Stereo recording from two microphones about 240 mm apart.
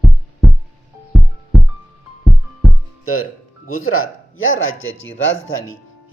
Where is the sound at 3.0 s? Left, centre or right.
Left.